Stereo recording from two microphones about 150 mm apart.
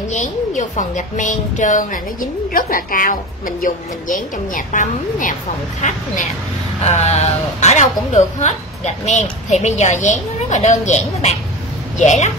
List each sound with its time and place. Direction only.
0.1 s a woman's voice: 55° left (ahead or behind)